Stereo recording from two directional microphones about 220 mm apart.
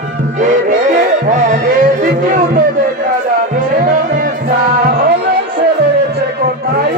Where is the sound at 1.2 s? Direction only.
35° right (ahead or behind).